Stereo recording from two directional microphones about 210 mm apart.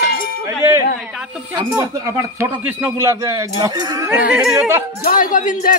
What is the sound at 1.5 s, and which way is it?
Speech, 15° right (ahead or behind).